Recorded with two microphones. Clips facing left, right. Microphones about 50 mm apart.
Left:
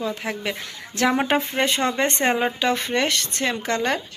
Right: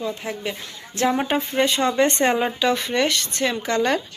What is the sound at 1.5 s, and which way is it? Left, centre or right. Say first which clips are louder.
Speech: right 2 dB; left.